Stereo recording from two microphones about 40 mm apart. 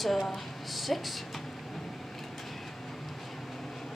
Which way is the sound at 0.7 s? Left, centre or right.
Centre.